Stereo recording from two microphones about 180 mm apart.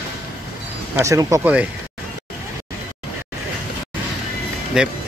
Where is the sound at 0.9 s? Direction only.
15° right (ahead or behind).